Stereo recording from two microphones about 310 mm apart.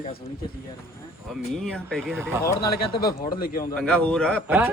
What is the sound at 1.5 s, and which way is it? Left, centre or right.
Speech, centre.